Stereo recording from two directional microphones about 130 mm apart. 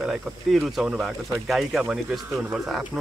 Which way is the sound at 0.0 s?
Centre (ahead or behind).